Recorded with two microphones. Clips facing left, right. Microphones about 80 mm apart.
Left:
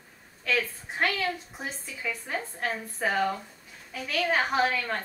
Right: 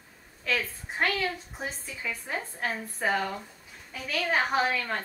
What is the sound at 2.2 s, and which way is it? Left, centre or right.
A woman's voice, centre.